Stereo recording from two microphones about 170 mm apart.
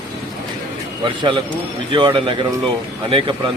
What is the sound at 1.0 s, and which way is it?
A man's voice, 25° right (ahead or behind).